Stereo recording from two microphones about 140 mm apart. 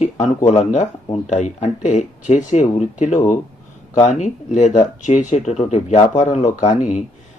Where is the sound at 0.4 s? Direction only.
55° left (ahead or behind).